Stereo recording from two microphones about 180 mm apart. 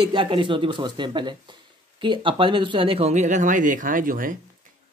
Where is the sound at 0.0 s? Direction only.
25° right (ahead or behind).